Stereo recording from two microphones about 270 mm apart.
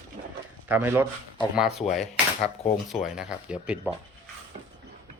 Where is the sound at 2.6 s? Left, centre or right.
Left.